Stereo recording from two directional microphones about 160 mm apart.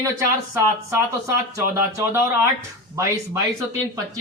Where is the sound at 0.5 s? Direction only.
15° right (ahead or behind).